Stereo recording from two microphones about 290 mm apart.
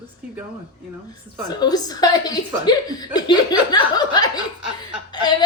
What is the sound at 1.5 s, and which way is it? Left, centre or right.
A woman's voice, centre.